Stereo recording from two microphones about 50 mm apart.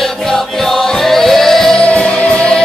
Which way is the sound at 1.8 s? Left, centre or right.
Left.